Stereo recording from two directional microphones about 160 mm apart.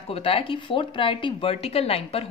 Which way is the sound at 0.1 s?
35° left (ahead or behind).